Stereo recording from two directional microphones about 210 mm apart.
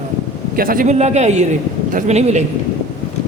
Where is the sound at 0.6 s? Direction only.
40° right (ahead or behind).